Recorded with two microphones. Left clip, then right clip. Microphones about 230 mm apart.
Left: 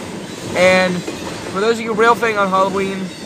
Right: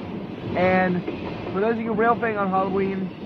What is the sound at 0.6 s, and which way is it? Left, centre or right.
Speech, left.